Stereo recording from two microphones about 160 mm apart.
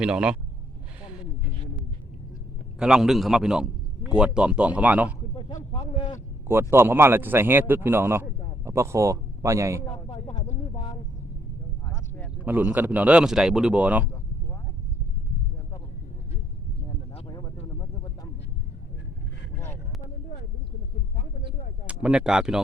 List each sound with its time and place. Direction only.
0.0 s a man's voice: 5° right (ahead or behind)
2.7 s a man's voice: 5° right (ahead or behind)
5.7 s a sound: 35° left (ahead or behind)
6.5 s a man's voice: 15° right (ahead or behind)
10.1 s speech: 35° left (ahead or behind)
12.5 s a man's voice: 10° right (ahead or behind)
17.2 s a sound: 25° left (ahead or behind)
19.5 s vehicle: 15° left (ahead or behind)
21.8 s speech: 5° right (ahead or behind)